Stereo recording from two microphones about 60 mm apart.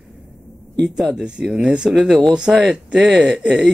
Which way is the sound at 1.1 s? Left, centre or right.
Centre.